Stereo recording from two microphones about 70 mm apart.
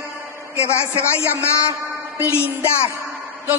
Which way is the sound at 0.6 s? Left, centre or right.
Left.